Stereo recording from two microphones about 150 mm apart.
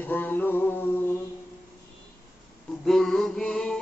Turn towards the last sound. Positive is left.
turn(degrees=5)  # may be behind; listen again after turning